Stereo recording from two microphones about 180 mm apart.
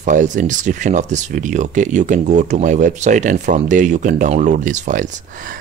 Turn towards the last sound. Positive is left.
turn(degrees=-45)  # may be behind; listen again after turning